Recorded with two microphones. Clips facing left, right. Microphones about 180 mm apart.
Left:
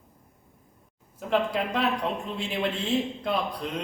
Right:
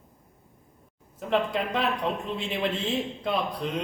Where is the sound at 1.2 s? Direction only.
Centre (ahead or behind).